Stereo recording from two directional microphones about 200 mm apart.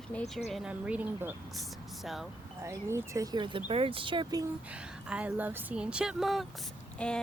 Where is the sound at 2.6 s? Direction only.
15° right (ahead or behind).